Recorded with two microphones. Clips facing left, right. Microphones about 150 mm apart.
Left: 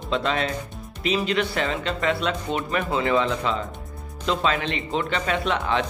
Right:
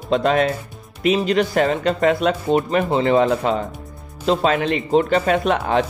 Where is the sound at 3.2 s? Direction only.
45° right (ahead or behind).